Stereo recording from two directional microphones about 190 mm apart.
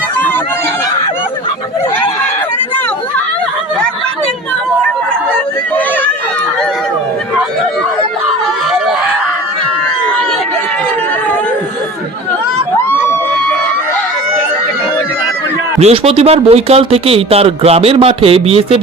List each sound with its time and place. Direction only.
12.7 s crowd: 15° left (ahead or behind)
15.8 s speech: 30° right (ahead or behind)